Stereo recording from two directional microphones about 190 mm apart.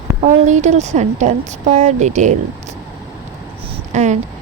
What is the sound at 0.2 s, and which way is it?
Speech, 40° right (ahead or behind).